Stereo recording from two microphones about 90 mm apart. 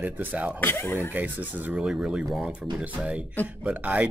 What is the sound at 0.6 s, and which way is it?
Speech, 25° left (ahead or behind).